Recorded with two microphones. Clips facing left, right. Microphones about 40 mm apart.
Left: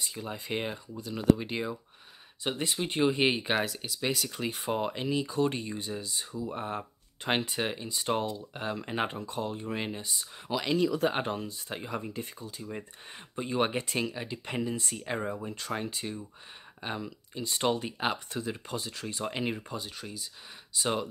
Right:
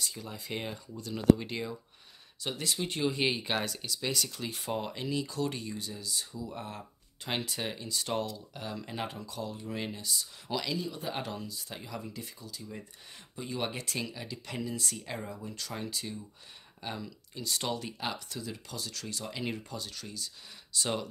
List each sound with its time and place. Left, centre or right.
0.0 s speech: left
0.9 s speech: centre
3.6 s speech: centre
4.3 s speech: left
9.8 s speech: left
10.5 s speech: centre
11.1 s speech: left; by 21.1 s centre